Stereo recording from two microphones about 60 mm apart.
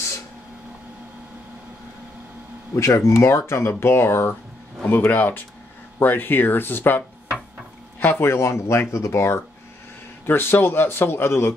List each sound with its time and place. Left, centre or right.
2.7 s a man's voice: left
8.0 s speech: left
10.2 s a man's voice: left